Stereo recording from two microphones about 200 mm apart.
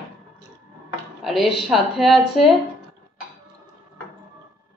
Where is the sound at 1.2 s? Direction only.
Centre (ahead or behind).